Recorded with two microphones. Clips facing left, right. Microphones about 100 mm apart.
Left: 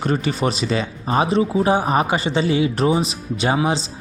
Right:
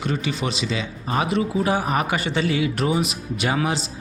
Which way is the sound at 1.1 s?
30° left (ahead or behind).